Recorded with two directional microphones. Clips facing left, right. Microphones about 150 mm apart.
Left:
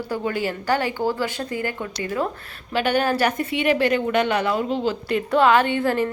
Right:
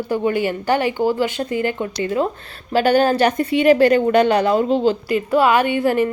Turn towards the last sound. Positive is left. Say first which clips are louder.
# right 4 dB
turn(degrees=-15)  # may be behind; listen again after turning